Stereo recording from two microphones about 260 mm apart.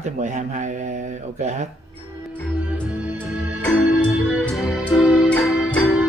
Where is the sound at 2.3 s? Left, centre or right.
Centre.